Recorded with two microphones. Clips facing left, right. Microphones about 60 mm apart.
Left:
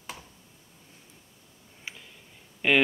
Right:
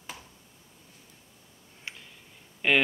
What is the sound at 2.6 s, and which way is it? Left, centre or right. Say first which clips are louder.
Speech: left 1 dB; centre.